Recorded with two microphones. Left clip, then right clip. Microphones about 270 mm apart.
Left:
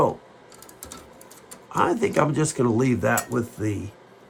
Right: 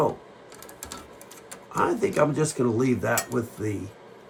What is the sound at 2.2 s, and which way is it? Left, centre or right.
Cutlery, left.